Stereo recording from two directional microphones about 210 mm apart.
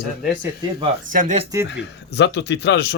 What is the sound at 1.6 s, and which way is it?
Speech, 55° left (ahead or behind).